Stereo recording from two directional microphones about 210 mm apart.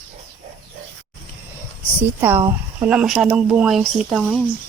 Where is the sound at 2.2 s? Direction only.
10° right (ahead or behind).